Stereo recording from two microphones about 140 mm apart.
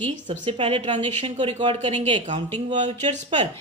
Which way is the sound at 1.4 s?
40° right (ahead or behind).